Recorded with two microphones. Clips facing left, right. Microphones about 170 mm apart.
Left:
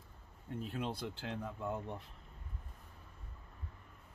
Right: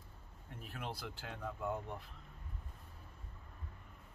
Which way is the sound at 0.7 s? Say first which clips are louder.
Left 4 dB; 25° left (ahead or behind).